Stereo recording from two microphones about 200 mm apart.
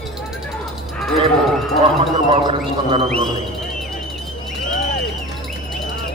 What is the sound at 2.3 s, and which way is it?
Speech, 25° right (ahead or behind).